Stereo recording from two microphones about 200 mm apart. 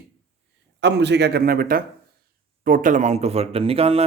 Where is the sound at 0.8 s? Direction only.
60° right (ahead or behind); by 4.0 s 30° right (ahead or behind).